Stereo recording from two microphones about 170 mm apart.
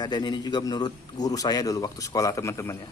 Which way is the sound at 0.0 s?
25° left (ahead or behind).